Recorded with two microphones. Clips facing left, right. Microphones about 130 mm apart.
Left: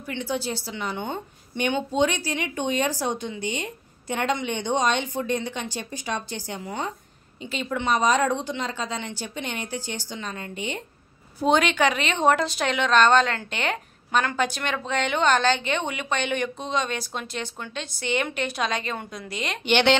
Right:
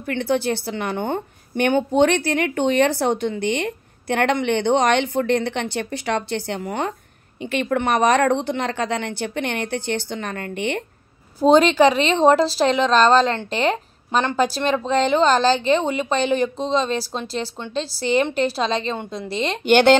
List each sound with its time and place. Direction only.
0.0 s a woman's voice: 60° right (ahead or behind)
11.4 s a woman's voice: 35° right (ahead or behind)
19.6 s speech: 45° right (ahead or behind)